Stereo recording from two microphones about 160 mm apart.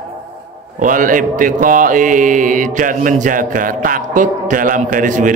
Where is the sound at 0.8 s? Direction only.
55° right (ahead or behind).